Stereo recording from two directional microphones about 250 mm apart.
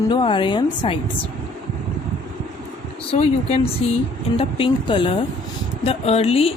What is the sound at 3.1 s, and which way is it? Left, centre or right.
A woman's voice, left.